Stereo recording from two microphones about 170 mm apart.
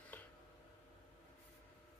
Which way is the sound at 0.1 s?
10° left (ahead or behind).